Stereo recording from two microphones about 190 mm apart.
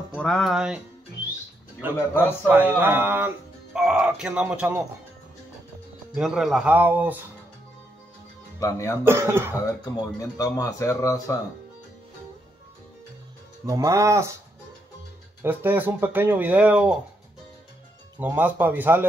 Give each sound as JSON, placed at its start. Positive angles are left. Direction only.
{"t": 0.1, "sound": "speech", "side_deg": 0}
{"t": 1.8, "sound": "speech", "side_deg": -10}
{"t": 6.1, "sound": "speech", "side_deg": 0}
{"t": 8.5, "sound": "speech", "side_deg": 15}
{"t": 9.0, "sound": "speech", "side_deg": -15}
{"t": 10.1, "sound": "speech", "side_deg": 15}
{"t": 13.7, "sound": "speech", "side_deg": -15}
{"t": 15.4, "sound": "speech", "side_deg": -10}
{"t": 18.2, "sound": "speech", "side_deg": -10}